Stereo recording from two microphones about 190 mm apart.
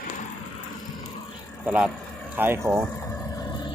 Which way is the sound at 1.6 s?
5° right (ahead or behind).